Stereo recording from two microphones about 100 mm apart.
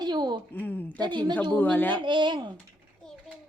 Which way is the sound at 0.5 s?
20° left (ahead or behind).